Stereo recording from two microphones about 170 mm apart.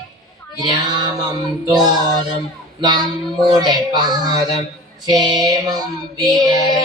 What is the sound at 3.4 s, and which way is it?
Music, 25° right (ahead or behind).